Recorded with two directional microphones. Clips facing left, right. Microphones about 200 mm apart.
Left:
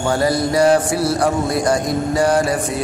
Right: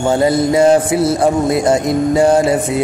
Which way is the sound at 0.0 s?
25° right (ahead or behind).